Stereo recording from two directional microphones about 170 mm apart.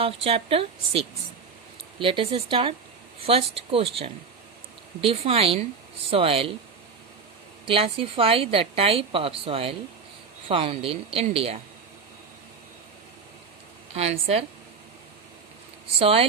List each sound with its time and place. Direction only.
0.0 s a woman's voice: 35° right (ahead or behind)
7.6 s a woman's voice: 30° right (ahead or behind)
13.9 s a woman's voice: 40° right (ahead or behind)
16.0 s a woman's voice: 35° right (ahead or behind)